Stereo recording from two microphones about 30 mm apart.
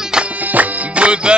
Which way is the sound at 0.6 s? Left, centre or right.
Right.